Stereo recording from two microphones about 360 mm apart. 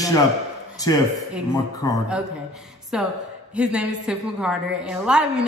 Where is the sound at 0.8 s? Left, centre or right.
Centre.